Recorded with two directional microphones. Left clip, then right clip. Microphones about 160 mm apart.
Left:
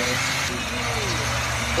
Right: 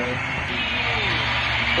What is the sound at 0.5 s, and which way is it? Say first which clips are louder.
Vehicle: right 3 dB; 35° left (ahead or behind).